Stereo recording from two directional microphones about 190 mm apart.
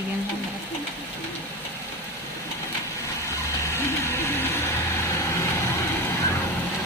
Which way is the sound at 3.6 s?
15° left (ahead or behind).